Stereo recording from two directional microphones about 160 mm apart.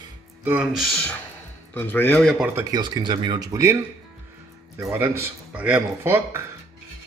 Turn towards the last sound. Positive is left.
turn(degrees=-15)  # may be behind; listen again after turning